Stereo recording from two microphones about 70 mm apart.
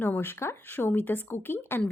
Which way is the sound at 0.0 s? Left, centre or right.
Left.